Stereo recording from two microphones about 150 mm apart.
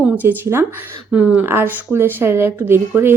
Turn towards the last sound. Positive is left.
turn(degrees=-15)  # may be behind; listen again after turning